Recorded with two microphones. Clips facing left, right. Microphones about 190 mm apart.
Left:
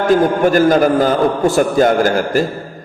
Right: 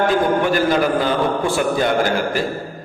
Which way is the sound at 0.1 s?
45° left (ahead or behind).